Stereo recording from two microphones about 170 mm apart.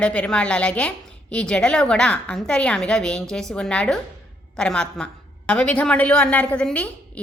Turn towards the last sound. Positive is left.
turn(degrees=10)  # may be behind; listen again after turning